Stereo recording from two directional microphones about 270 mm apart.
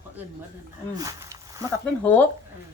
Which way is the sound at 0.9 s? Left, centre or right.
Centre.